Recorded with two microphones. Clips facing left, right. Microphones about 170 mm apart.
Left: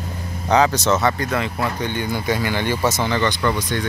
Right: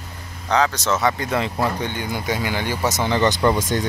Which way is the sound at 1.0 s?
20° right (ahead or behind).